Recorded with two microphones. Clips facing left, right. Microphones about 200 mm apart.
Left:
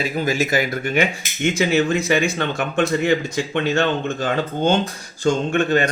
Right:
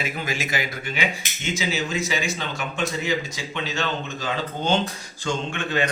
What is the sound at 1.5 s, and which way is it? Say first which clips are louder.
Speech: left 9 dB; 60° left (ahead or behind).